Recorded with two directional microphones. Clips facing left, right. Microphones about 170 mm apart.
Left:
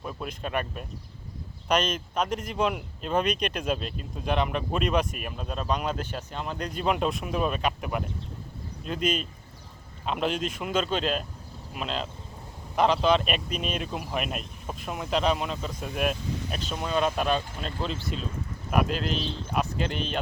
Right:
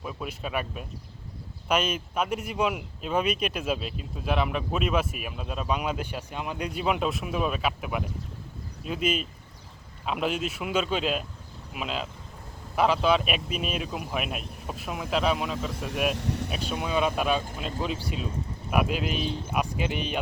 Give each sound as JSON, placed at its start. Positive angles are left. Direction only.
{"t": 0.0, "sound": "speech", "side_deg": -5}
{"t": 16.1, "sound": "a sound", "side_deg": -75}
{"t": 16.5, "sound": "speech", "side_deg": -5}